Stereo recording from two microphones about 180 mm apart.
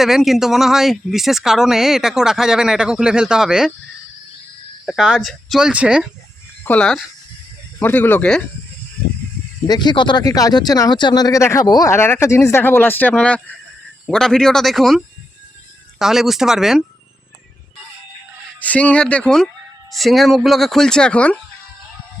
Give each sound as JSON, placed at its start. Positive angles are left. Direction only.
{"t": 0.0, "sound": "speech", "side_deg": 0}
{"t": 4.9, "sound": "speech", "side_deg": -5}
{"t": 6.7, "sound": "speech", "side_deg": 5}
{"t": 9.6, "sound": "speech", "side_deg": 25}
{"t": 18.6, "sound": "speech", "side_deg": 10}